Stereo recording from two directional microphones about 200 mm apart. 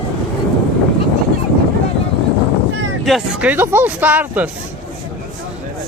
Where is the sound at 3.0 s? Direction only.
5° right (ahead or behind).